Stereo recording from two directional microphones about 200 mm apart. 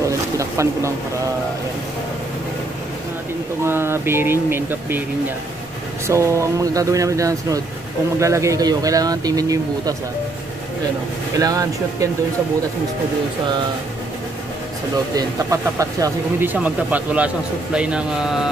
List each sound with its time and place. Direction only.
0.0 s a sound: 15° right (ahead or behind)
3.6 s speech: 10° right (ahead or behind)
6.0 s speech: 15° right (ahead or behind)
11.3 s speech: 15° right (ahead or behind)
15.1 s speech: 15° right (ahead or behind)